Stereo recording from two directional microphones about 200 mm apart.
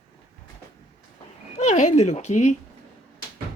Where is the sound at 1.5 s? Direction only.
35° left (ahead or behind).